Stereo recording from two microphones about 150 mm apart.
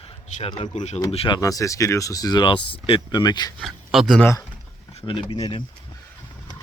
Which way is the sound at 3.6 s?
Centre (ahead or behind).